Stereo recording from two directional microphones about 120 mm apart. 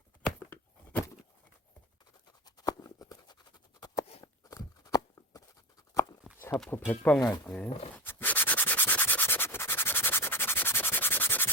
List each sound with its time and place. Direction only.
0.3 s a sound: 15° left (ahead or behind)
2.6 s a sound: 30° left (ahead or behind)
6.7 s speech: 15° left (ahead or behind)
7.2 s speech: 25° left (ahead or behind)
7.5 s speech: 10° left (ahead or behind)
8.0 s sanding: 15° left (ahead or behind)